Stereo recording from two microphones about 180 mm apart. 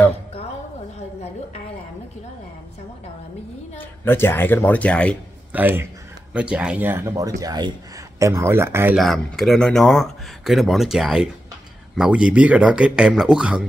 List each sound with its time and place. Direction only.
0.9 s a woman's voice: 35° left (ahead or behind)
3.7 s a woman's voice: 10° left (ahead or behind)
5.5 s speech: 10° right (ahead or behind)
8.9 s speech: centre (ahead or behind)